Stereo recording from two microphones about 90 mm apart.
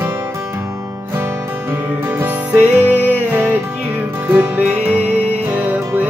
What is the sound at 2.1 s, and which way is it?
Music, 20° right (ahead or behind).